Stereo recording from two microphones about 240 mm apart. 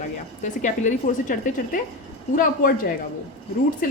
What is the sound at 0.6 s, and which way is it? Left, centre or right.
Speech, left.